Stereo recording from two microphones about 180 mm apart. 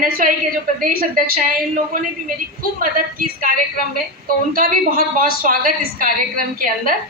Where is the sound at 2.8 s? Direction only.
50° right (ahead or behind).